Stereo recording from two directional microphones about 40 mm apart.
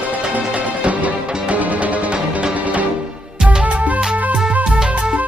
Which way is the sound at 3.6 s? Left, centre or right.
Right.